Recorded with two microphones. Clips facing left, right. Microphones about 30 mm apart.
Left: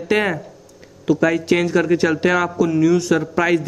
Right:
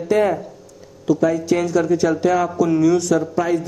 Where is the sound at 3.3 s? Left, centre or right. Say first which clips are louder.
Left 2 dB; left.